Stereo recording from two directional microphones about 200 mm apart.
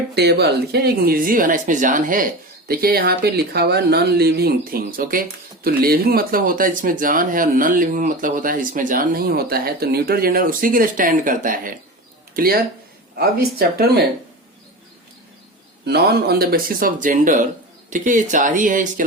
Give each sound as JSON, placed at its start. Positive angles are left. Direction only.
{"t": 0.1, "sound": "speech", "side_deg": -55}
{"t": 15.9, "sound": "speech", "side_deg": -55}